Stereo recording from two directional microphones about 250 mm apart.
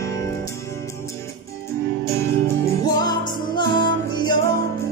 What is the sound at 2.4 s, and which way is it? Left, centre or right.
Music, centre.